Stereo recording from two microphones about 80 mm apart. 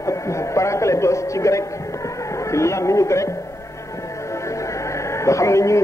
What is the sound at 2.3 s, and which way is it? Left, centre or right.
Speech, left.